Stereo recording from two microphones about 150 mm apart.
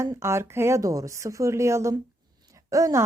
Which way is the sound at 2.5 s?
20° right (ahead or behind).